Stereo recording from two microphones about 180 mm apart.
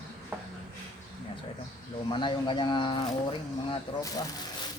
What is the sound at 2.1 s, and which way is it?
Speech, 25° left (ahead or behind).